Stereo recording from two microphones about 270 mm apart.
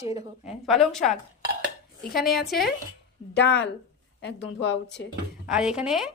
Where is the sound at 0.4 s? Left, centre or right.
Centre.